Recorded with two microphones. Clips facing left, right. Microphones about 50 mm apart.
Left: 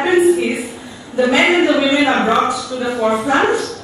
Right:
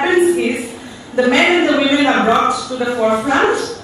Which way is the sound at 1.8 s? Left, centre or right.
Centre.